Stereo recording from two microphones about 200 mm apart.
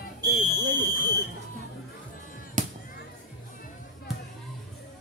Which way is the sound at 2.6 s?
40° right (ahead or behind).